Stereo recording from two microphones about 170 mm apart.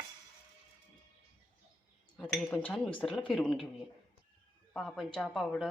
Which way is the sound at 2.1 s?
10° left (ahead or behind).